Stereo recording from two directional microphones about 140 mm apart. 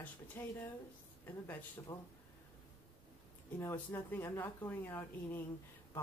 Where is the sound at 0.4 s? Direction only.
15° left (ahead or behind).